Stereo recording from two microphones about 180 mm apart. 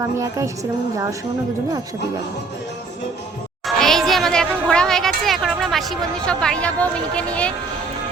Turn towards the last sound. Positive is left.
turn(degrees=5)  # may be behind; listen again after turning